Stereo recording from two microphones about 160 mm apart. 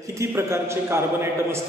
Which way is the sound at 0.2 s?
15° right (ahead or behind).